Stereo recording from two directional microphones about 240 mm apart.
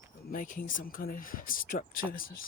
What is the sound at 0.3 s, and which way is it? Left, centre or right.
Speech, left.